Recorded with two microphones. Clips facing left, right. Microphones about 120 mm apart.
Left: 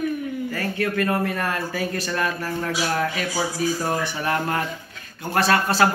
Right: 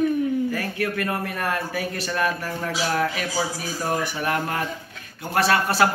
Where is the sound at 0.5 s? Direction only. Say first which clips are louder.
Left 2 dB; 10° right (ahead or behind).